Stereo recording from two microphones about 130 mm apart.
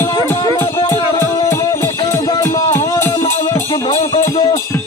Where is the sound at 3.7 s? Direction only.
50° left (ahead or behind).